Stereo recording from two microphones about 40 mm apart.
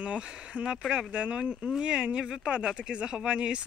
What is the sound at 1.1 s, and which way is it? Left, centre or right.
Speech, right.